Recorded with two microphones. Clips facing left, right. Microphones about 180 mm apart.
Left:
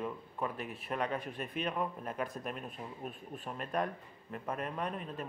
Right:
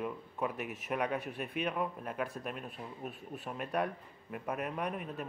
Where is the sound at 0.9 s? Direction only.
10° right (ahead or behind).